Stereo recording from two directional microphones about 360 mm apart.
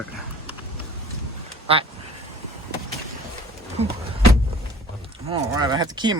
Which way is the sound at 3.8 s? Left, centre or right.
Centre.